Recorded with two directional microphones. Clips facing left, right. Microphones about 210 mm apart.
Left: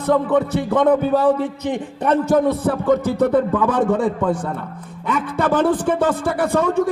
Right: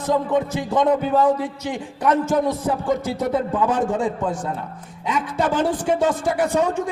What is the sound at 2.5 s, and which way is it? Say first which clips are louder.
A man's voice: left 4 dB; 60° left (ahead or behind).